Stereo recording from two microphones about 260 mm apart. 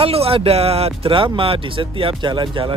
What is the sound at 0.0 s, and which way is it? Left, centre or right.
Speech, right.